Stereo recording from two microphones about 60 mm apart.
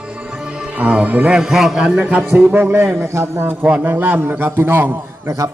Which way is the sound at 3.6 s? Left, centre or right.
Right.